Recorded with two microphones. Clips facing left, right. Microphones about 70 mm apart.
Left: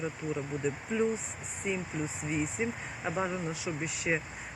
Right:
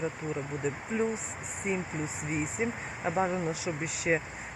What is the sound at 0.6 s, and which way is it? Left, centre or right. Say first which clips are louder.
Speech: even; right.